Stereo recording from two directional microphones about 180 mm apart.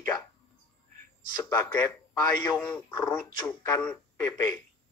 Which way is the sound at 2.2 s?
15° left (ahead or behind).